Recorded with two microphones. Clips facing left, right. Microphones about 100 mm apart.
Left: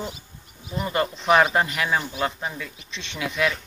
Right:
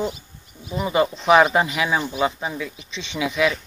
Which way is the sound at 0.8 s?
10° right (ahead or behind).